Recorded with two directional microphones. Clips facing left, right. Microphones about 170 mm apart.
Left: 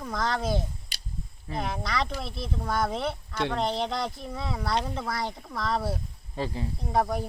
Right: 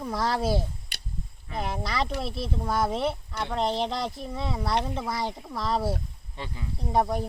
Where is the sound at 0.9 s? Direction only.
60° right (ahead or behind).